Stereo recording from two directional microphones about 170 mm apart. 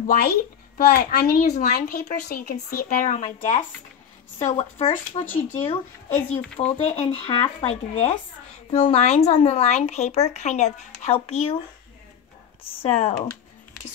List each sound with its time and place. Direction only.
0.0 s a child's voice: 55° left (ahead or behind); by 5.2 s 35° left (ahead or behind)
5.2 s speech: 10° left (ahead or behind)
6.8 s speech: 40° left (ahead or behind)
12.8 s speech: 35° left (ahead or behind)